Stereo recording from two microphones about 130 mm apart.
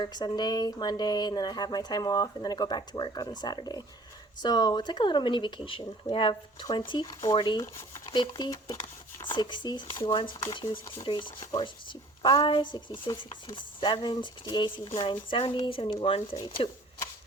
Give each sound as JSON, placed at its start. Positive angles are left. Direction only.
{"t": 0.0, "sound": "speech", "side_deg": 30}
{"t": 7.0, "sound": "speech", "side_deg": 25}
{"t": 7.3, "sound": "speech", "side_deg": 35}
{"t": 7.6, "sound": "speech", "side_deg": 20}
{"t": 8.1, "sound": "speech", "side_deg": 35}